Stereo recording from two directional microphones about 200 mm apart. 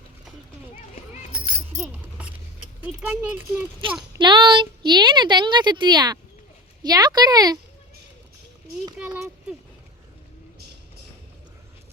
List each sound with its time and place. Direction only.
1.7 s a sound: 10° right (ahead or behind)
2.8 s speech: 10° right (ahead or behind)
4.2 s a woman's voice: 25° right (ahead or behind)
9.0 s speech: 10° right (ahead or behind)